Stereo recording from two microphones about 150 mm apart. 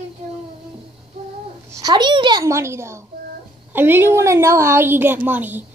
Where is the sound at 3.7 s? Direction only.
15° right (ahead or behind).